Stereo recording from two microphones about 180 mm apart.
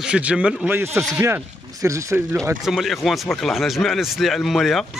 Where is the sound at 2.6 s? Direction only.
Centre (ahead or behind).